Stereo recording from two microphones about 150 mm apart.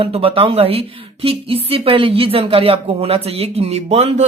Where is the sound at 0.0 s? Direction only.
40° right (ahead or behind).